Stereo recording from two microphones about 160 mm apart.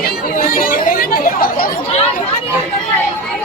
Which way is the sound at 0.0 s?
60° left (ahead or behind).